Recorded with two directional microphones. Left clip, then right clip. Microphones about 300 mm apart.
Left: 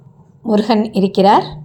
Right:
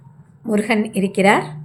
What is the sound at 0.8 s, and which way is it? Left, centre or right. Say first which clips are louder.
Speech: left 4 dB; centre.